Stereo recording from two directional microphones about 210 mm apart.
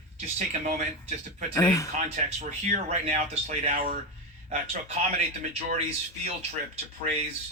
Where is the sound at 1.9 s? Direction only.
35° right (ahead or behind).